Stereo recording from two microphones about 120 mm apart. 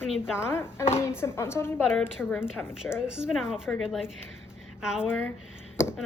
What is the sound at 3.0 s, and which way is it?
A woman's voice, 5° right (ahead or behind).